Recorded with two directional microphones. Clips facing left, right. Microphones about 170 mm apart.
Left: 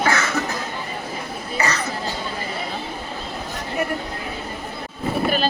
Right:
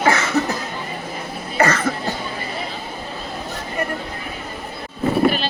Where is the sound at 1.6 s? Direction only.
50° right (ahead or behind).